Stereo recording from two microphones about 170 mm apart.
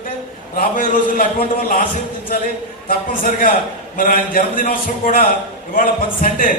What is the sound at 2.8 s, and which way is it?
A man's voice, 55° left (ahead or behind).